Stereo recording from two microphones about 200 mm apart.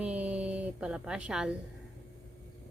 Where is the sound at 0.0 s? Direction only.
5° right (ahead or behind).